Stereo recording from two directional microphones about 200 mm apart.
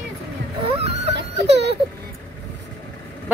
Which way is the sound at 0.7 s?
30° right (ahead or behind).